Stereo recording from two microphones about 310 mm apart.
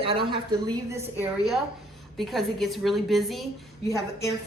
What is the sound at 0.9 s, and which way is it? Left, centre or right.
A woman's voice, centre.